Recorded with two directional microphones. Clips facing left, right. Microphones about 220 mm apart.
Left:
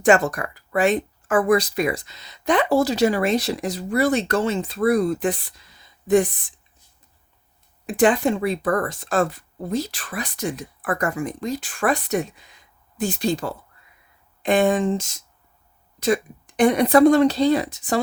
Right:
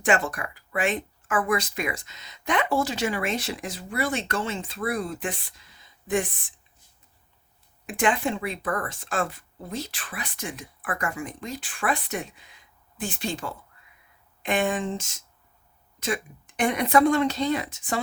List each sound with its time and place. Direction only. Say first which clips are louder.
0.0 s speech: left 7 dB; 40° left (ahead or behind)
7.9 s speech: left 7 dB; 35° left (ahead or behind)